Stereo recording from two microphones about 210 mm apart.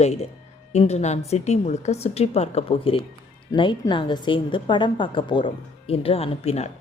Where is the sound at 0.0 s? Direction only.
30° left (ahead or behind).